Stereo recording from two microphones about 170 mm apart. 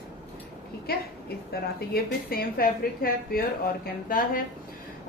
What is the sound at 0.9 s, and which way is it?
A woman's voice, 65° left (ahead or behind).